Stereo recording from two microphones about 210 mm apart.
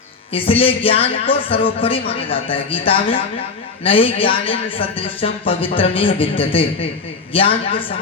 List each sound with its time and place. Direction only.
0.3 s speech: 25° left (ahead or behind)